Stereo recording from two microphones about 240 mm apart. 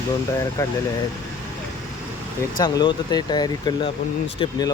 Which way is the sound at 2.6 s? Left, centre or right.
Centre.